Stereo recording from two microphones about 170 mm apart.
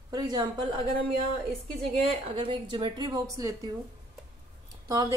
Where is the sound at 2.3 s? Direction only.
30° right (ahead or behind).